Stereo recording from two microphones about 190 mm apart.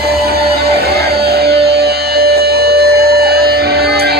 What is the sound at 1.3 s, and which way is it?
Music, 55° right (ahead or behind).